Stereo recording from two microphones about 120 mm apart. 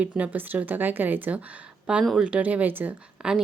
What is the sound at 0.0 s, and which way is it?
A woman's voice, 10° right (ahead or behind).